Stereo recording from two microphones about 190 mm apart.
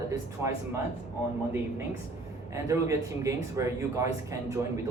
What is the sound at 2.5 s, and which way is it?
Speech, 15° right (ahead or behind).